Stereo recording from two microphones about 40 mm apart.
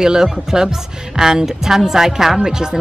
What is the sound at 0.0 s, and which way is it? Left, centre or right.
A woman's voice, centre.